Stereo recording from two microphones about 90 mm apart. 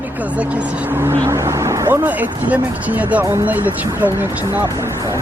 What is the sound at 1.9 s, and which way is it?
Speech, 20° right (ahead or behind).